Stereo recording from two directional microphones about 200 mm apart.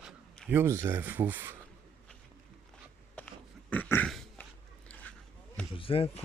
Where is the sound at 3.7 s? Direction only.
10° left (ahead or behind).